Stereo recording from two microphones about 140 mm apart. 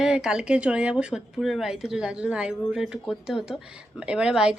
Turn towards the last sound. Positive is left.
turn(degrees=-5)  # may be behind; listen again after turning